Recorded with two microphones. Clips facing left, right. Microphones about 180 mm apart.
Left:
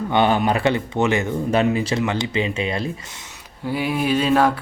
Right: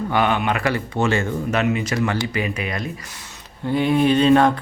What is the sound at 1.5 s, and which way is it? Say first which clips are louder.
Speech: left 4 dB; 30° left (ahead or behind).